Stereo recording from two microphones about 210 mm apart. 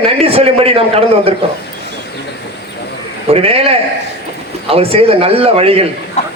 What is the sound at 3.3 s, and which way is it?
A man's voice, 30° right (ahead or behind).